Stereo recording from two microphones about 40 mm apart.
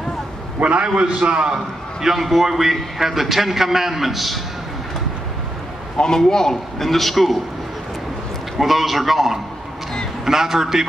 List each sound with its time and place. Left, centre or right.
0.6 s a man's voice: right
2.0 s a man's voice: centre
5.9 s a man's voice: centre
8.5 s a man's voice: centre